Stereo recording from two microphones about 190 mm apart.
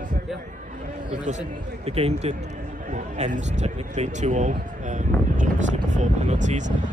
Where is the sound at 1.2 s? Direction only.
35° right (ahead or behind).